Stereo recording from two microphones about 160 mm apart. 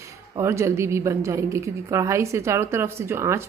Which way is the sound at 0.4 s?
15° right (ahead or behind).